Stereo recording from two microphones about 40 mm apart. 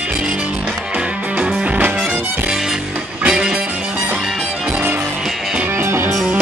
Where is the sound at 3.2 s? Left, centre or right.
Right.